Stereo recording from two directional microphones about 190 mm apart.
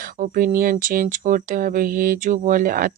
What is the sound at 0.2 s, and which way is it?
Speech, 45° right (ahead or behind).